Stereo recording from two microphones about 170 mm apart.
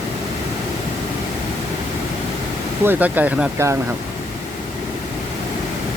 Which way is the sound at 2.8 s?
10° right (ahead or behind).